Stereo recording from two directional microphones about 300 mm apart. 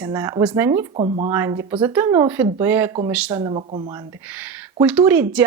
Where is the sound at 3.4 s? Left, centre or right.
Centre.